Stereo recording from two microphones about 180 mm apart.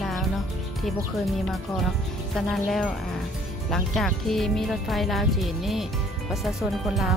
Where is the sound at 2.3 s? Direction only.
Centre (ahead or behind).